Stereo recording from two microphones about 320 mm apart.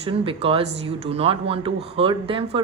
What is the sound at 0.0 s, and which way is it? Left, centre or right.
Speech, centre.